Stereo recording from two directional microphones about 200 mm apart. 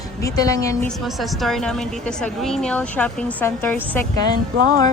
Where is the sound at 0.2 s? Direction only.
15° left (ahead or behind).